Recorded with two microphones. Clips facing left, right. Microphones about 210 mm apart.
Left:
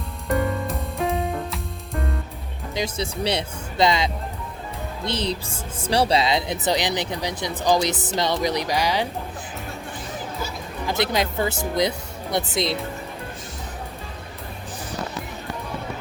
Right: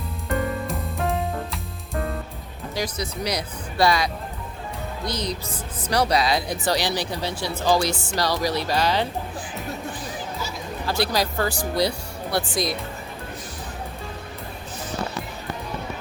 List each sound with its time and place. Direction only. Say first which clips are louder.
0.7 s music: left 1 dB; centre (ahead or behind)
2.7 s speech: left 2 dB; 25° left (ahead or behind)
10.8 s speech: left 1 dB; 20° left (ahead or behind)